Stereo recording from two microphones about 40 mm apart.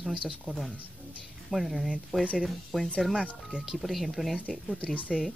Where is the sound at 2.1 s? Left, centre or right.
Right.